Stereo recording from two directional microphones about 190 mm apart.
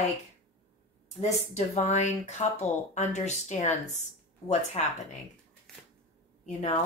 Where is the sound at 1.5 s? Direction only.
35° left (ahead or behind).